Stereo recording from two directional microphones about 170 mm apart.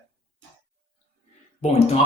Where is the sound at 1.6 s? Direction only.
35° left (ahead or behind).